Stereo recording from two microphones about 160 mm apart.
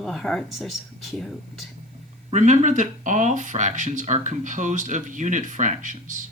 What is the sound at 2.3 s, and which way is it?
Speech, 50° right (ahead or behind).